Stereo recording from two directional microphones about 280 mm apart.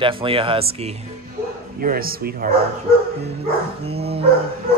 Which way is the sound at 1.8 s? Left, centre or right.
Right.